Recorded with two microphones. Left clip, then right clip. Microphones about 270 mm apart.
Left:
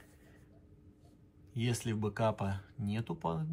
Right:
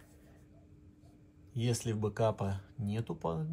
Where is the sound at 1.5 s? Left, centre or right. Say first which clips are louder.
Right 1 dB; centre.